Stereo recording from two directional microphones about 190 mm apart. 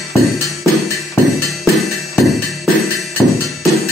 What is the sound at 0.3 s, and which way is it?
Music, centre (ahead or behind).